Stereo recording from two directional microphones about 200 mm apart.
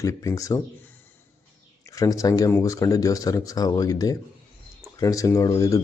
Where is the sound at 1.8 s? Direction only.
15° left (ahead or behind).